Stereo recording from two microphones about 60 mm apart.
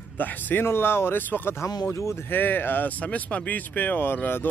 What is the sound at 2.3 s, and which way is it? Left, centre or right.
Speech, left.